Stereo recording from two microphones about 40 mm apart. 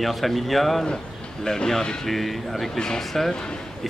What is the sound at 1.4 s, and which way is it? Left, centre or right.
Speech, centre.